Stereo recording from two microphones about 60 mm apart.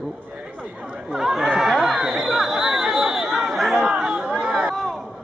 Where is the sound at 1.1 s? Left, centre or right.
Centre.